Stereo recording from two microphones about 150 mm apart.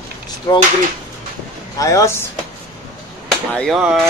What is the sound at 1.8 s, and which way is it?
Speech, 20° left (ahead or behind).